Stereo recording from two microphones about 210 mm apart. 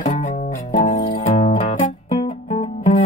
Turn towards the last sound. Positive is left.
turn(degrees=25)  # may be behind; listen again after turning